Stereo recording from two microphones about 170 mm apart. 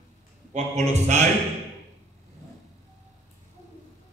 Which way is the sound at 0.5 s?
40° right (ahead or behind).